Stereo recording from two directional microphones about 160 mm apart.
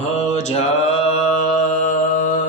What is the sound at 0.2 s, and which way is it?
Mantra, 45° left (ahead or behind).